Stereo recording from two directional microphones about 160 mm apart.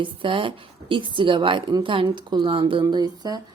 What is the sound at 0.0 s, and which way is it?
Speech, 30° right (ahead or behind).